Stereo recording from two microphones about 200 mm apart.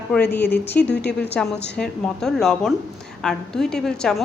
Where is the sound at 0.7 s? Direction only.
55° left (ahead or behind).